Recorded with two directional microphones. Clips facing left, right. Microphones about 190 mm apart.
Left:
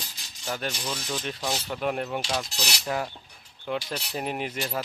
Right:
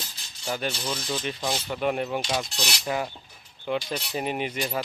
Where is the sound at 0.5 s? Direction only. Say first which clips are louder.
Right 2 dB; centre (ahead or behind).